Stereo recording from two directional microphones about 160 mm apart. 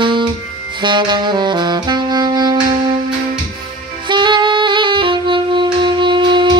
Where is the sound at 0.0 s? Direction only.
30° right (ahead or behind).